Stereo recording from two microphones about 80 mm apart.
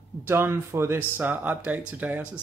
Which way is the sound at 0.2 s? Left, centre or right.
Right.